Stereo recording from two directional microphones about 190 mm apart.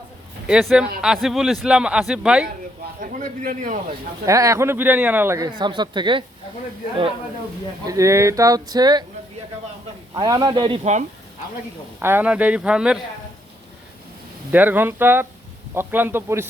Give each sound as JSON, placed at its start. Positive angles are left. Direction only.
{"t": 0.4, "sound": "a man's voice", "side_deg": 0}
{"t": 3.0, "sound": "a man's voice", "side_deg": -45}
{"t": 4.3, "sound": "speech", "side_deg": -15}
{"t": 7.9, "sound": "speech", "side_deg": -15}
{"t": 10.2, "sound": "speech", "side_deg": -20}
{"t": 11.9, "sound": "speech", "side_deg": -10}
{"t": 14.5, "sound": "speech", "side_deg": -10}